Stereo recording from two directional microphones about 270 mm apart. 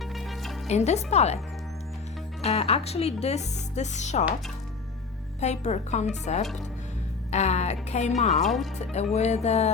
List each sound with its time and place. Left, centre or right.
0.0 s music: centre
0.7 s speech: left
2.4 s speech: left
5.4 s speech: left
8.3 s speech: centre
9.1 s speech: left